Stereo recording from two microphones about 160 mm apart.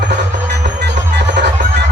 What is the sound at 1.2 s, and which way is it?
Music, 90° right.